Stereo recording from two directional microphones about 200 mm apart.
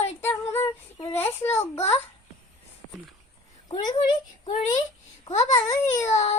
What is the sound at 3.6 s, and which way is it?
A child's voice, 20° left (ahead or behind).